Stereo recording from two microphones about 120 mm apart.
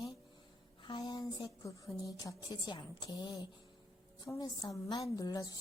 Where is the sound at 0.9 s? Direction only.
35° left (ahead or behind).